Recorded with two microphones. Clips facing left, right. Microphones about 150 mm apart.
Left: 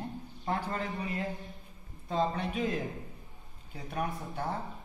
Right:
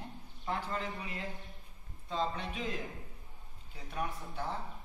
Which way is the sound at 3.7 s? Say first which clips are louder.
Left 4 dB; 50° left (ahead or behind).